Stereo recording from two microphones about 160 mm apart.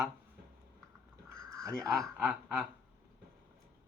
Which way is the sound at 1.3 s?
20° right (ahead or behind).